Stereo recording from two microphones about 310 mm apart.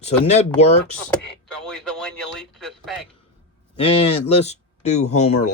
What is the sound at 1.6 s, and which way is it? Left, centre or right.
Speech, centre.